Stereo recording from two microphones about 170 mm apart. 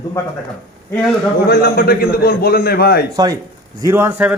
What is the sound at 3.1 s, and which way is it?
A man's voice, 20° right (ahead or behind).